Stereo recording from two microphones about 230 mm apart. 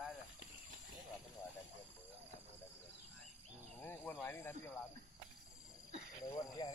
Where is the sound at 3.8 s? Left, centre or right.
Centre.